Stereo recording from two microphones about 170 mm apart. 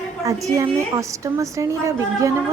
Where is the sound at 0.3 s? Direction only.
20° right (ahead or behind).